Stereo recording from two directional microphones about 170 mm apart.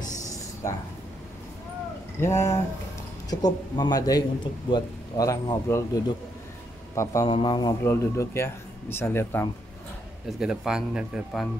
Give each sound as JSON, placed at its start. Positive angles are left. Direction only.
{"t": 2.1, "sound": "speech", "side_deg": 15}
{"t": 7.2, "sound": "speech", "side_deg": 30}
{"t": 7.8, "sound": "speech", "side_deg": 15}
{"t": 10.2, "sound": "speech", "side_deg": -5}